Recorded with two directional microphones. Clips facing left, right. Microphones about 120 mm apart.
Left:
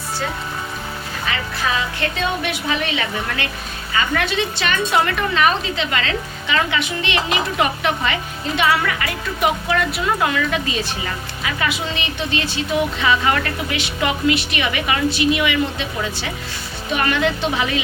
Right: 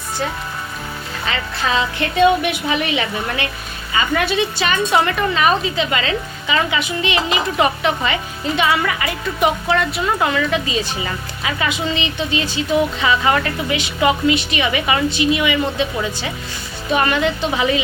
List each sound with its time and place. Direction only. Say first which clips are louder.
1.3 s a woman's voice: right 2 dB; 25° right (ahead or behind); by 15.9 s centre (ahead or behind)
17.1 s a woman's voice: right 1 dB; centre (ahead or behind)